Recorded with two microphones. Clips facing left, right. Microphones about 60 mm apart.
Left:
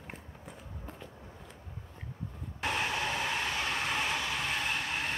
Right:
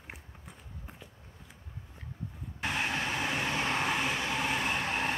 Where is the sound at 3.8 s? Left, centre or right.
Centre.